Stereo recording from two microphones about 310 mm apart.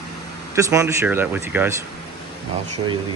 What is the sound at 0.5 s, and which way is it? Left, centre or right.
Speech, centre.